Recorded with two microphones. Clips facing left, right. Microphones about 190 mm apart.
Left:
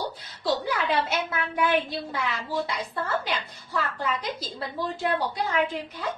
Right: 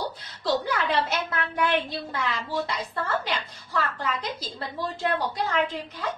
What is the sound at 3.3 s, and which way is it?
A woman's voice, 5° left (ahead or behind).